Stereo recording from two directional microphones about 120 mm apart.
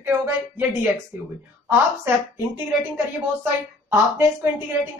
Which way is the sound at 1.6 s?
20° right (ahead or behind).